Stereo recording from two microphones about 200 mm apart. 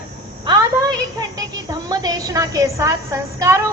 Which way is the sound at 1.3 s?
20° right (ahead or behind).